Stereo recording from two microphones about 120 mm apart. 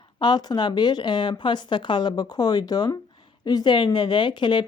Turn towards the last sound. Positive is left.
turn(degrees=40)  # may be behind; listen again after turning